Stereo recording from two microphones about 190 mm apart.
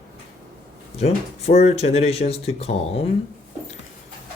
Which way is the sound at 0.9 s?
35° left (ahead or behind).